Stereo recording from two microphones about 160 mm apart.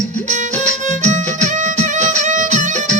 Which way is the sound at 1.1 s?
50° right (ahead or behind).